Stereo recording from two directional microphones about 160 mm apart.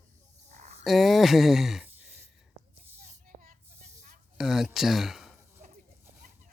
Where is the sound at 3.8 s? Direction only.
45° right (ahead or behind).